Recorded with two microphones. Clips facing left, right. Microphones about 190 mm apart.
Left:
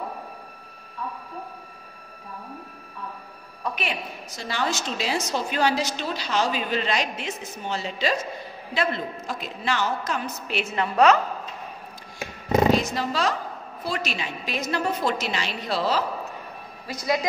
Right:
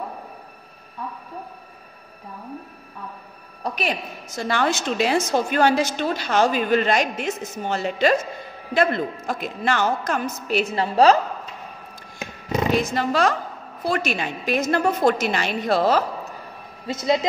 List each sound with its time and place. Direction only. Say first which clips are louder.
3.6 s a woman's voice: right 4 dB; 40° right (ahead or behind)
4.4 s a woman's voice: right 5 dB; 55° right (ahead or behind); by 11.1 s 35° right (ahead or behind)
12.9 s a woman's voice: right 5 dB; 55° right (ahead or behind)
16.8 s speech: right 4 dB; 25° right (ahead or behind)